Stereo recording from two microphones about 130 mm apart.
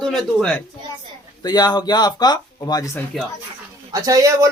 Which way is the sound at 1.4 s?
30° left (ahead or behind).